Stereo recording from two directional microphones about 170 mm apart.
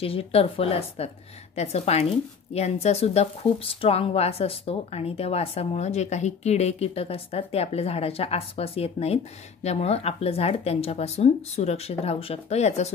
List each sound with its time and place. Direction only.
0.0 s speech: 35° left (ahead or behind)